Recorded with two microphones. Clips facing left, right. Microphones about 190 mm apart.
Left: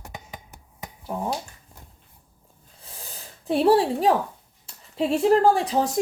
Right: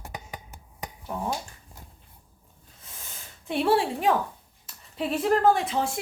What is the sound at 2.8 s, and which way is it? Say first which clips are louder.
Snort: left 4 dB; 35° left (ahead or behind).